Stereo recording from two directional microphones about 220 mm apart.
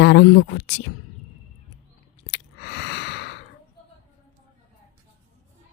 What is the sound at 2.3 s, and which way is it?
Sigh, 50° left (ahead or behind).